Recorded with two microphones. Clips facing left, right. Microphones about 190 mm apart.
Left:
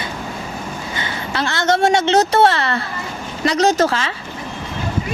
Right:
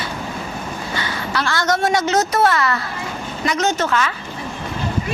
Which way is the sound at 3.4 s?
35° left (ahead or behind).